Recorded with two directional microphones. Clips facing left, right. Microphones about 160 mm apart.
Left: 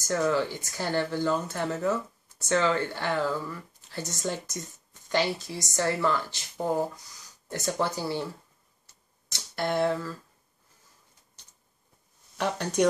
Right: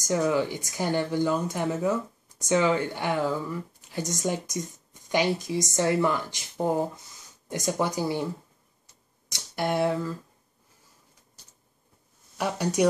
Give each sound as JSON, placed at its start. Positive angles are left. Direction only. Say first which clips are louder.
{"t": 0.0, "sound": "speech", "louder": "right 1 dB", "side_deg": -15}
{"t": 9.3, "sound": "speech", "louder": "right 1 dB", "side_deg": -15}
{"t": 12.4, "sound": "speech", "louder": "right 1 dB", "side_deg": -10}